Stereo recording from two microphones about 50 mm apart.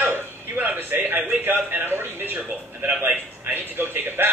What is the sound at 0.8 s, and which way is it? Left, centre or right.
A man's voice, right.